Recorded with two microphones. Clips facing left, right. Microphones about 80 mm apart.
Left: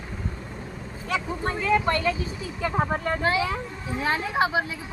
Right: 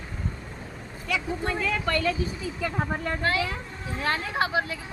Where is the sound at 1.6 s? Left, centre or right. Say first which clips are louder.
Left 7 dB; left.